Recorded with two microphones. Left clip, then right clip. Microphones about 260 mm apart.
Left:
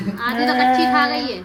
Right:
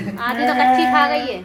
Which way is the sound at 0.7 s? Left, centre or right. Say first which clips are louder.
Right 2 dB; left.